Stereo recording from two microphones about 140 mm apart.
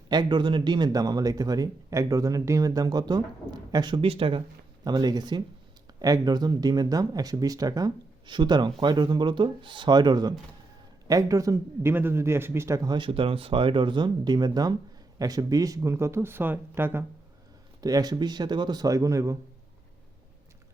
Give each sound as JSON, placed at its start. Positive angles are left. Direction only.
{"t": 0.1, "sound": "speech", "side_deg": -30}
{"t": 17.7, "sound": "speech", "side_deg": -25}